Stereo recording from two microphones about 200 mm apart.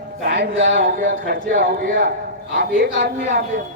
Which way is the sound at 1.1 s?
50° right (ahead or behind).